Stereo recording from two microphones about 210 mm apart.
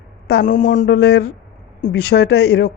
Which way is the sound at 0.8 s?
50° left (ahead or behind).